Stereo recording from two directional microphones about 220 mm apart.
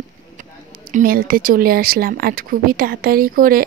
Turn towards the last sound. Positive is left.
turn(degrees=-40)  # may be behind; listen again after turning